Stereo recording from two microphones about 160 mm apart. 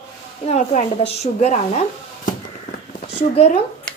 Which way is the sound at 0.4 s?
45° left (ahead or behind).